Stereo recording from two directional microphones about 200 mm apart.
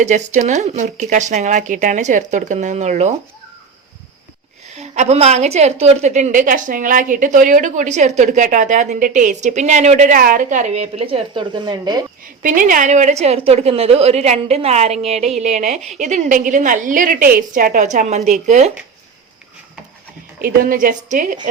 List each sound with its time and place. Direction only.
0.0 s a woman's voice: 35° right (ahead or behind)
4.7 s a woman's voice: 35° right (ahead or behind)
12.4 s a woman's voice: 40° right (ahead or behind)
20.4 s a woman's voice: 45° right (ahead or behind)